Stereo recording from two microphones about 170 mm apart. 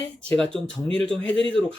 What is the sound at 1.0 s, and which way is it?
Speech, 5° left (ahead or behind).